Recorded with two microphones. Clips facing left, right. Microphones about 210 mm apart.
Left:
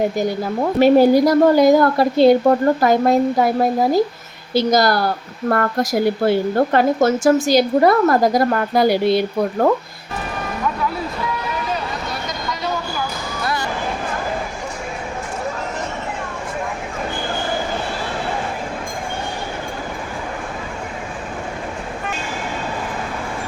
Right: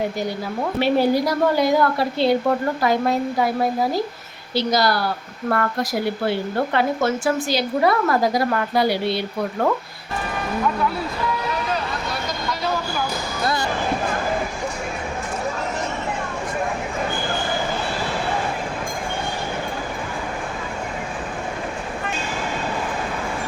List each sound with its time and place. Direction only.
0.8 s speech: 45° left (ahead or behind)
4.5 s speech: 45° left (ahead or behind)
13.4 s basketball bounce: 35° right (ahead or behind)